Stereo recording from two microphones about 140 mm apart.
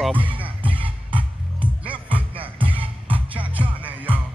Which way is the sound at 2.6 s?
40° right (ahead or behind).